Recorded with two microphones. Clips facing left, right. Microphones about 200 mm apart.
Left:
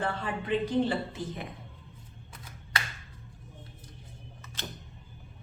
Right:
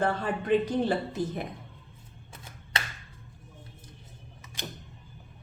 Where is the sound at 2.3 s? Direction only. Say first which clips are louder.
Right 1 dB; 25° right (ahead or behind).